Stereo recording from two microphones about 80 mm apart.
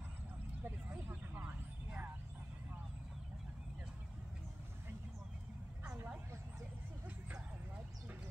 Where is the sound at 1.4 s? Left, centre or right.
Centre.